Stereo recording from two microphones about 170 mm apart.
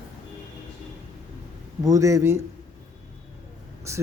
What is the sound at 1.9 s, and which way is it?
Speech, 20° right (ahead or behind).